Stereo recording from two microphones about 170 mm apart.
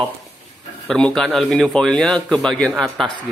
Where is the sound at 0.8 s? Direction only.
5° left (ahead or behind).